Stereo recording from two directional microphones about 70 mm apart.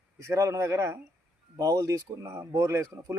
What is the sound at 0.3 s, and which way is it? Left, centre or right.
Speech, right.